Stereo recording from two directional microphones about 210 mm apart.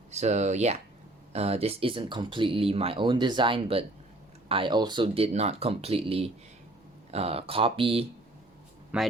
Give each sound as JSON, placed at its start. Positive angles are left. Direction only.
{"t": 0.1, "sound": "speech", "side_deg": -30}
{"t": 8.9, "sound": "speech", "side_deg": -5}